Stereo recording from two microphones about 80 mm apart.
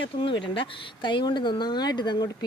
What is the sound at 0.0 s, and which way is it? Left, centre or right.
Speech, left.